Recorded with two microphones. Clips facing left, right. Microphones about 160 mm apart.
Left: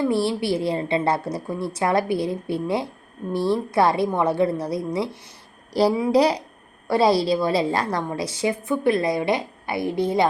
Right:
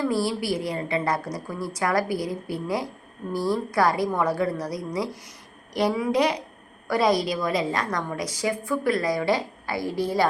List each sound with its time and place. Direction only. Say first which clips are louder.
0.0 s a woman's voice: left 3 dB; 25° left (ahead or behind)